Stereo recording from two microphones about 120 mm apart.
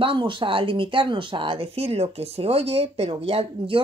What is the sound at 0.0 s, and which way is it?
Speech, 45° right (ahead or behind).